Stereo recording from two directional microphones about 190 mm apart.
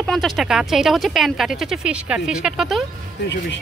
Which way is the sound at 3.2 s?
65° left (ahead or behind).